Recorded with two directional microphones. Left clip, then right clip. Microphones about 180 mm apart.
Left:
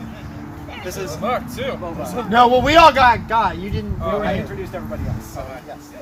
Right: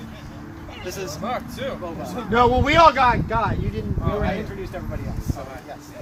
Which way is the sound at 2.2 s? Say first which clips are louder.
Left 5 dB; 65° left (ahead or behind).